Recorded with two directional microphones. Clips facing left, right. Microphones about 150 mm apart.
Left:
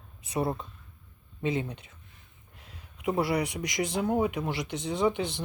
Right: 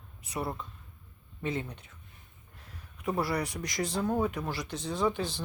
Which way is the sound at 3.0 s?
20° left (ahead or behind).